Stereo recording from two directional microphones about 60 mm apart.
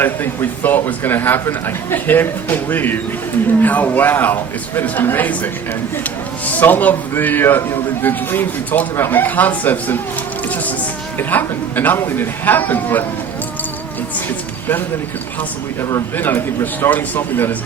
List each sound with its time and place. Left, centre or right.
0.4 s a man's voice: left
14.3 s speech: left
16.1 s a man's voice: left